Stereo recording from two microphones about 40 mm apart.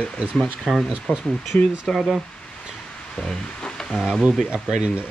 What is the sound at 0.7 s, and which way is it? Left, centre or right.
Speech, centre.